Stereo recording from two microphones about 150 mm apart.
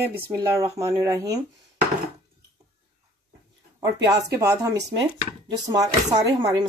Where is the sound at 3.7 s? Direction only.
25° right (ahead or behind).